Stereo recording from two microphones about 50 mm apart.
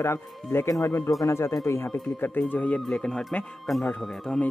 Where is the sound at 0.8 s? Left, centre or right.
Left.